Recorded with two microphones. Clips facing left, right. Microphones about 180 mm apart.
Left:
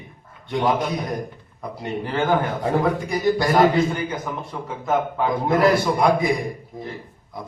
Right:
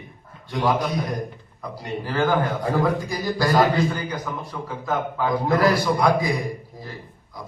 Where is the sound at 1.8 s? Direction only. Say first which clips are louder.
Left 1 dB; 25° left (ahead or behind).